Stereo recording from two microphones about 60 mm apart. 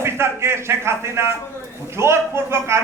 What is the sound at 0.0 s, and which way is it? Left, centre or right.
A man's voice, right.